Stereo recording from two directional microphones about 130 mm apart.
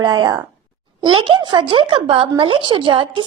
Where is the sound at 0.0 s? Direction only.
35° right (ahead or behind).